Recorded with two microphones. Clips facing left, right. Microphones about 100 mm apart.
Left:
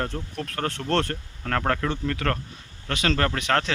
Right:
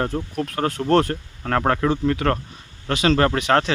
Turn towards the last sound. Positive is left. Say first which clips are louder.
# right 6 dB
turn(degrees=-10)  # may be behind; listen again after turning